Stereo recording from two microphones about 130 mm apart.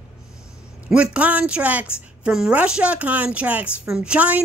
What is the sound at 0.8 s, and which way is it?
A woman's voice, 10° right (ahead or behind).